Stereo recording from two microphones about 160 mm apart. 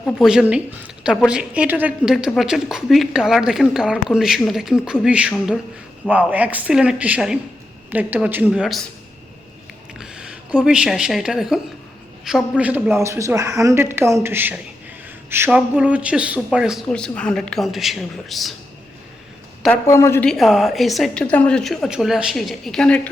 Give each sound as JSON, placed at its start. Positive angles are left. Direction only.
{"t": 0.2, "sound": "a woman's voice", "side_deg": -5}
{"t": 10.0, "sound": "a man's voice", "side_deg": -5}
{"t": 19.9, "sound": "a woman's voice", "side_deg": 15}
{"t": 20.2, "sound": "a woman's voice", "side_deg": 0}